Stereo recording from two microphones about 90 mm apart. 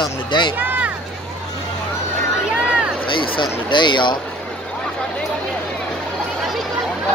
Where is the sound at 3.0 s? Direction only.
70° left (ahead or behind).